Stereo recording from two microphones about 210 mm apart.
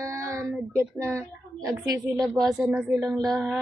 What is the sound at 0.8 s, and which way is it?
A woman's voice, 10° right (ahead or behind).